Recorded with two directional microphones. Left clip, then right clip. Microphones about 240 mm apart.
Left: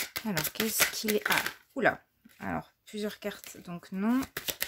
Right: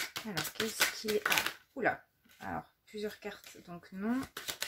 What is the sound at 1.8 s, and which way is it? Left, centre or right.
Speech, left.